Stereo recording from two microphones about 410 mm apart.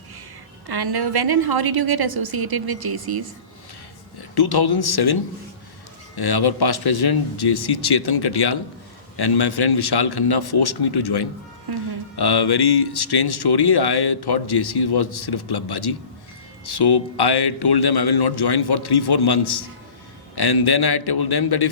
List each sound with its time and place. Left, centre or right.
0.7 s a woman's voice: right
4.2 s speech: left
6.1 s speech: left
11.7 s a woman's voice: right
12.1 s a man's voice: left